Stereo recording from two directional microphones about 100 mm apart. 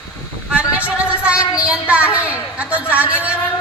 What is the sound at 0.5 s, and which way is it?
A woman's voice, 15° right (ahead or behind).